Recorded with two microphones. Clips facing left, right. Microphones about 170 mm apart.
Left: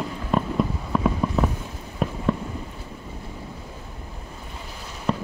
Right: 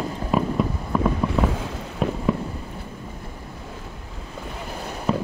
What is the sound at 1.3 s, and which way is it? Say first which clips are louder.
Boat: right 2 dB; 90° right.